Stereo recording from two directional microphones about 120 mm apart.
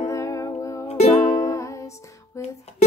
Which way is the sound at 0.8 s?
70° left (ahead or behind).